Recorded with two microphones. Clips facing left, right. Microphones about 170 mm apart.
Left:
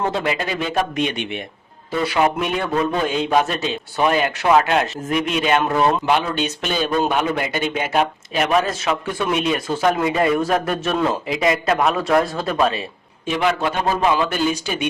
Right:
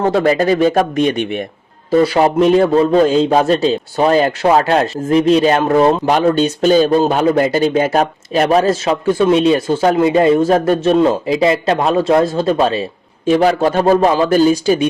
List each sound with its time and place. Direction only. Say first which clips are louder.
0.1 s a man's voice: right 10 dB; 45° right (ahead or behind)